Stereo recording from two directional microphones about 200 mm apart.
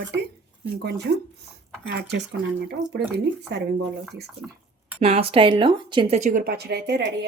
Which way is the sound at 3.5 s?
60° right (ahead or behind).